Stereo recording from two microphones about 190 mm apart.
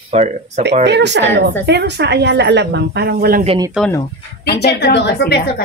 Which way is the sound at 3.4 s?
25° right (ahead or behind).